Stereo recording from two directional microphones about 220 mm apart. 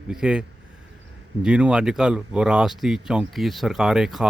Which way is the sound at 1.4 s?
5° right (ahead or behind).